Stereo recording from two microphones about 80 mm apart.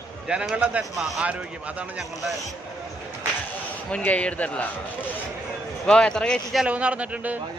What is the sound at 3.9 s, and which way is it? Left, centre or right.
Speech, centre.